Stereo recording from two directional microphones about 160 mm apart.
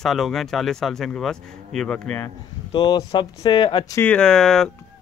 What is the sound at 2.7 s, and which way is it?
Speech, 30° left (ahead or behind).